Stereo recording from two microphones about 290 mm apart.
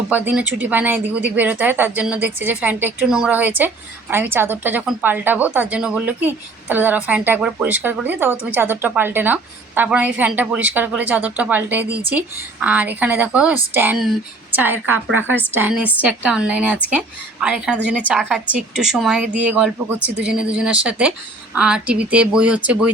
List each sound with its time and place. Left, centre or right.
0.1 s a woman's voice: centre